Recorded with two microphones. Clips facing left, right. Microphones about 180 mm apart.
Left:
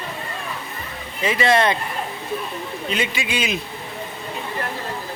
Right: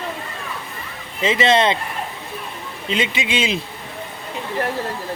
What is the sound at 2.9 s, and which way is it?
Speech, 25° right (ahead or behind).